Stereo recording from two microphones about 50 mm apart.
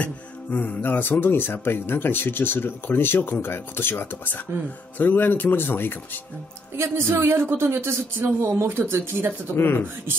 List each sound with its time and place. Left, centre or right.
0.0 s speech: left
6.8 s a man's voice: right
8.6 s speech: right
9.6 s speech: left